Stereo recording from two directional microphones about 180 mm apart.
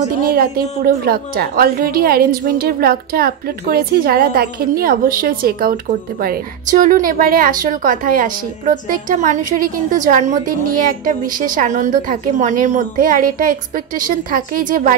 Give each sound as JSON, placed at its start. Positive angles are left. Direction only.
{"t": 0.3, "sound": "a woman's voice", "side_deg": -55}